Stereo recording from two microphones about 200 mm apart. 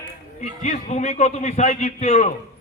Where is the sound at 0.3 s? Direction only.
35° left (ahead or behind).